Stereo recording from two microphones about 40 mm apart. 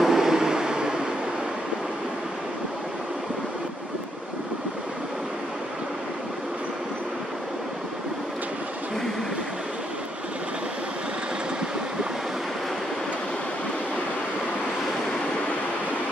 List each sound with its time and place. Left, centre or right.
0.0 s vehicle: centre